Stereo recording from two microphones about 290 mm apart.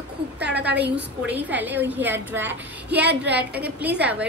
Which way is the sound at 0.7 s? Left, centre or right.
Right.